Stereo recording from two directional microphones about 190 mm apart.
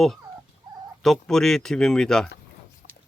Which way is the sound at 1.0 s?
Centre (ahead or behind).